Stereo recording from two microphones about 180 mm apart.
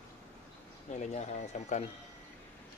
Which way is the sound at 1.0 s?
40° left (ahead or behind).